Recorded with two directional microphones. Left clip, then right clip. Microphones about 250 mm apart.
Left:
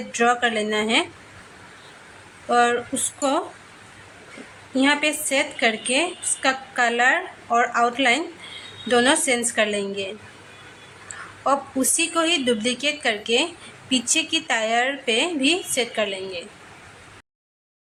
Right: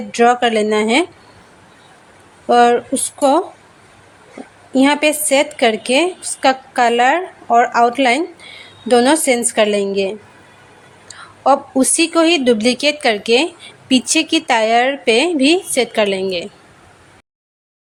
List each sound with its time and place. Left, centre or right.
0.1 s a woman's voice: right
2.5 s speech: right
4.7 s a woman's voice: right
11.4 s speech: right